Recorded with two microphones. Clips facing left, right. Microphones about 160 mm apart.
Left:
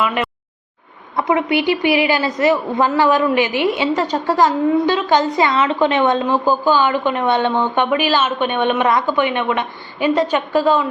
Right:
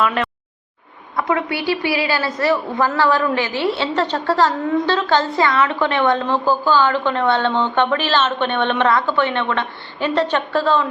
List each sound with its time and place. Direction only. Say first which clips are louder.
0.0 s a woman's voice: even; 5° left (ahead or behind)
1.1 s a woman's voice: left 4 dB; 20° left (ahead or behind)